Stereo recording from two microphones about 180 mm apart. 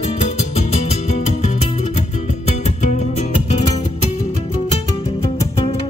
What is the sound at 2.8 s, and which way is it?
Music, 40° left (ahead or behind).